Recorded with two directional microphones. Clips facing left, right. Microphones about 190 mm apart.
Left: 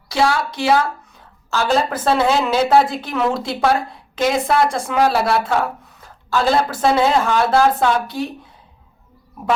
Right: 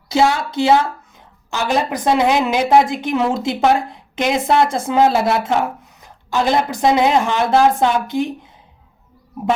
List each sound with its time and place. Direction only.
0.1 s a woman's voice: 20° right (ahead or behind)